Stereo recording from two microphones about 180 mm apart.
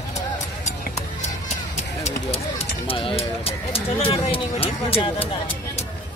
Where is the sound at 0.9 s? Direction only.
40° left (ahead or behind).